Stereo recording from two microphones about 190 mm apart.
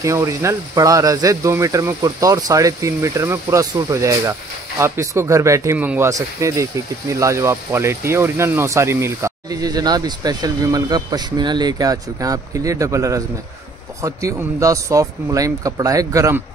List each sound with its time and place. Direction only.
0.0 s speech: 15° right (ahead or behind)